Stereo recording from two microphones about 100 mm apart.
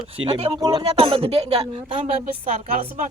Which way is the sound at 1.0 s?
75° right (ahead or behind).